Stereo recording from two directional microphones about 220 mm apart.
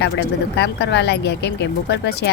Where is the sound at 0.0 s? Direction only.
50° left (ahead or behind).